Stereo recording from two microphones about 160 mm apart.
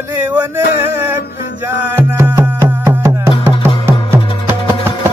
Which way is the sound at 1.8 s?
15° right (ahead or behind).